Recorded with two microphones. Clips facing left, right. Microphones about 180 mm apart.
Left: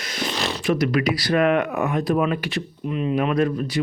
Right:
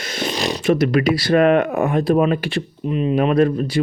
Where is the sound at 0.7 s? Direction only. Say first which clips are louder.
Right 4 dB; 25° right (ahead or behind).